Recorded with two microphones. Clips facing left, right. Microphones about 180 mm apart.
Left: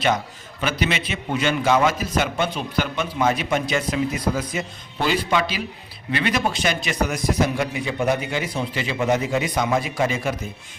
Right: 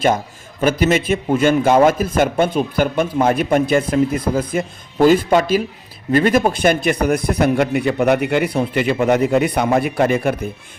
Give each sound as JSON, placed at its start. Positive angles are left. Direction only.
{"t": 0.6, "sound": "a man's voice", "side_deg": -45}